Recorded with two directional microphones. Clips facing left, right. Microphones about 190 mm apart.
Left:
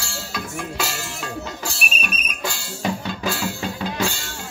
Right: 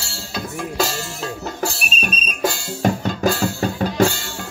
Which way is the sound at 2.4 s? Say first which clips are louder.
Right 9 dB; 45° right (ahead or behind).